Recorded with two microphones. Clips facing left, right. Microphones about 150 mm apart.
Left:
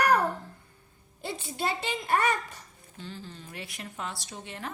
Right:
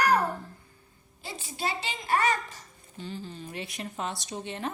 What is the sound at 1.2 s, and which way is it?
A child's voice, 60° left (ahead or behind).